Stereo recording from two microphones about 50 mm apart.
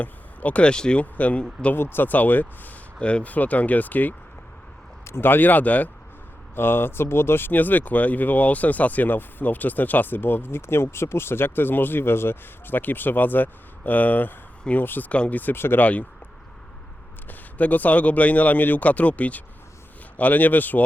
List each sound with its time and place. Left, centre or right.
0.0 s speech: left
1.7 s speech: left
3.0 s speech: left
5.0 s speech: left
6.6 s speech: left
15.1 s speech: left
15.5 s speech: left
15.8 s speech: left
17.2 s speech: left